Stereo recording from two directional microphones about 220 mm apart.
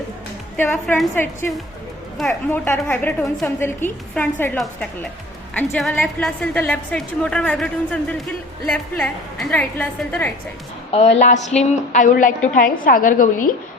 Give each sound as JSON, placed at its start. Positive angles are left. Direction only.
{"t": 0.5, "sound": "a woman's voice", "side_deg": 10}
{"t": 10.9, "sound": "a woman's voice", "side_deg": 30}
{"t": 11.3, "sound": "a sound", "side_deg": 30}